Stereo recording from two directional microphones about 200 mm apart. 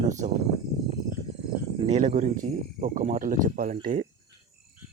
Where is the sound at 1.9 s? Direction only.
35° right (ahead or behind).